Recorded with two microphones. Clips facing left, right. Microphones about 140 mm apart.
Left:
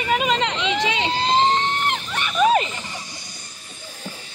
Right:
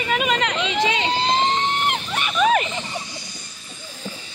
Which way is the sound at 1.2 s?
35° left (ahead or behind).